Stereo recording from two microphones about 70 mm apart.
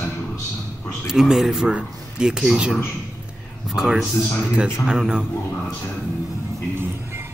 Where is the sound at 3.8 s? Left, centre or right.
Centre.